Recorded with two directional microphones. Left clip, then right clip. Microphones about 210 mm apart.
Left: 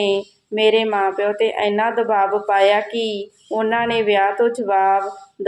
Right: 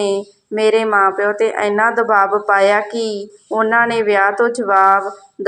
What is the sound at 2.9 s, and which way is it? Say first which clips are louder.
Speech: right 2 dB; 30° left (ahead or behind).